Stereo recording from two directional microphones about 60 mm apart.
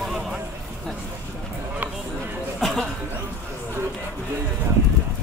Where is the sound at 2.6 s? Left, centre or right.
Centre.